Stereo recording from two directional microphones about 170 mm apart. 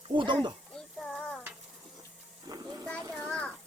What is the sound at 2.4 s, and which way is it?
Speech, 20° right (ahead or behind).